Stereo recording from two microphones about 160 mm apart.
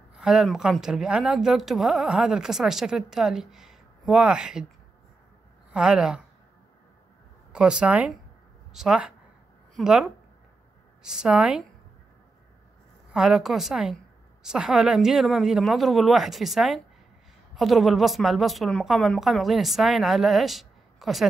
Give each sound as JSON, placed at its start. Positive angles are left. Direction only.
{"t": 0.2, "sound": "speech", "side_deg": -5}
{"t": 5.7, "sound": "speech", "side_deg": -5}
{"t": 7.5, "sound": "speech", "side_deg": -5}
{"t": 13.1, "sound": "speech", "side_deg": -5}